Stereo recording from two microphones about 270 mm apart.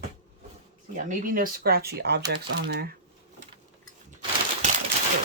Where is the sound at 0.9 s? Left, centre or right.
Right.